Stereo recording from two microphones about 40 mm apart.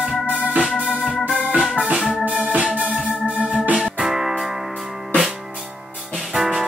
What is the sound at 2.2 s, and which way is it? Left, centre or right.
Organ, right.